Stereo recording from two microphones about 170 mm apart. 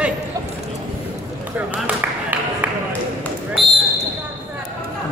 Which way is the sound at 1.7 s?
10° right (ahead or behind).